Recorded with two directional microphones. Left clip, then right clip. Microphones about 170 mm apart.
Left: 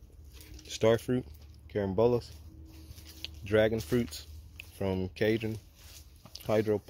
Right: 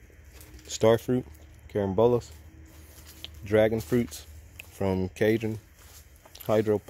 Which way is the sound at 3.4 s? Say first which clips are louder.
Right 4 dB; 15° right (ahead or behind).